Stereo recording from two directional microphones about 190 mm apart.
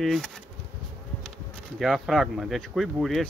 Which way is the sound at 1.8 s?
Centre (ahead or behind).